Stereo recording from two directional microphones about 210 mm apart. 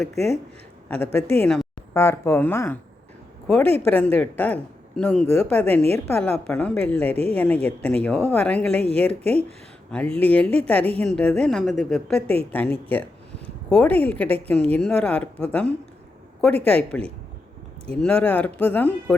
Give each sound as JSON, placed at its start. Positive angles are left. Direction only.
{"t": 0.9, "sound": "a man's voice", "side_deg": 5}